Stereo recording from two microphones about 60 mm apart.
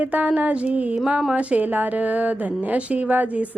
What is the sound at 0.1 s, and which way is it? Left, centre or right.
Speech, right.